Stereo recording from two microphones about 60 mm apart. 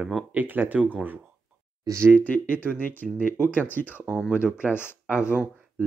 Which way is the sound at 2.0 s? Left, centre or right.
Left.